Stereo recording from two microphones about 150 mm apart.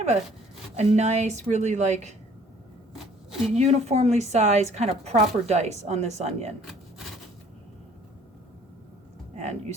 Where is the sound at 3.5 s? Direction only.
45° right (ahead or behind).